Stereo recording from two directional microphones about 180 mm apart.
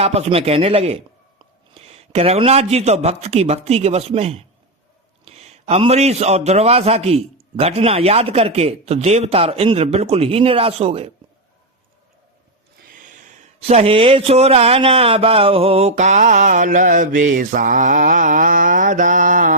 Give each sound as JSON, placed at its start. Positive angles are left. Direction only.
{"t": 0.0, "sound": "a man's voice", "side_deg": -35}
{"t": 13.0, "sound": "speech", "side_deg": -45}